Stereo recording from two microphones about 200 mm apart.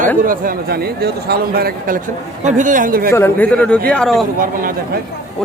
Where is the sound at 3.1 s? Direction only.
10° left (ahead or behind).